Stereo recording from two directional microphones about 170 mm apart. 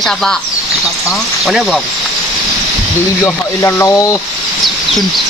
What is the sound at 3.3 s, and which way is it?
Speech, 15° left (ahead or behind).